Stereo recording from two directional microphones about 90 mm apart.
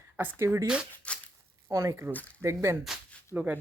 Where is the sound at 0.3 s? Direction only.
35° right (ahead or behind).